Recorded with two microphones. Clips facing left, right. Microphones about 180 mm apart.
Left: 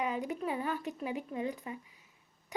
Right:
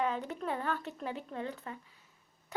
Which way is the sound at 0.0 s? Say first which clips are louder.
Even; 10° left (ahead or behind).